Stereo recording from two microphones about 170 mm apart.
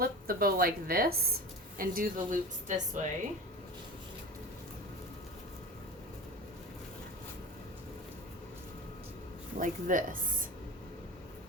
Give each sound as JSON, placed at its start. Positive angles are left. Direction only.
{"t": 0.0, "sound": "a woman's voice", "side_deg": -60}
{"t": 9.6, "sound": "a woman's voice", "side_deg": -50}